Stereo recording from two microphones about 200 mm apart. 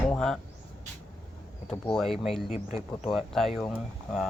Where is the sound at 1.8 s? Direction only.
Centre (ahead or behind).